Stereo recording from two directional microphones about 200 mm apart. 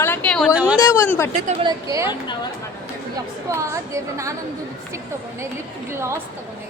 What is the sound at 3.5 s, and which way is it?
Speech, 15° right (ahead or behind).